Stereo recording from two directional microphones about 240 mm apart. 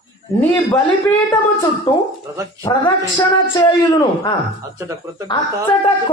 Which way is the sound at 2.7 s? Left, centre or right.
Centre.